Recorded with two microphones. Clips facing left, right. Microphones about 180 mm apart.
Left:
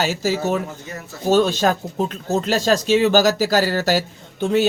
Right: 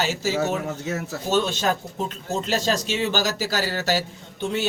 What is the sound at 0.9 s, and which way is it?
Speech, 75° right (ahead or behind).